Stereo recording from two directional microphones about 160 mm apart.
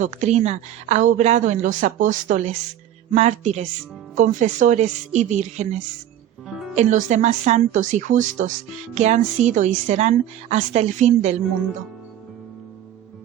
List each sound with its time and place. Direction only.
0.0 s a woman's voice: 45° right (ahead or behind)
6.7 s a woman's voice: 45° right (ahead or behind)